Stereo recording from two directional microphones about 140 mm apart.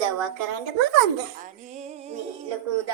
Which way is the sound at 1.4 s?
55° right (ahead or behind).